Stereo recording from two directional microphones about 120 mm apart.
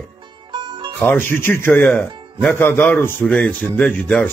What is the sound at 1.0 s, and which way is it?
Speech, 15° left (ahead or behind).